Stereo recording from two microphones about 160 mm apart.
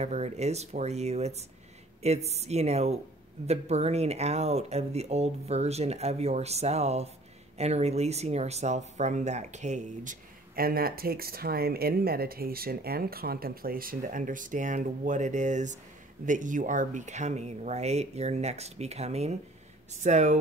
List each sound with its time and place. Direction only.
0.0 s speech: 45° right (ahead or behind)
10.5 s speech: 70° right (ahead or behind); by 20.3 s 45° right (ahead or behind)